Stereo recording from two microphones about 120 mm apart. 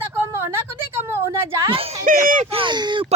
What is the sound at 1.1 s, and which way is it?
Speech, 20° right (ahead or behind).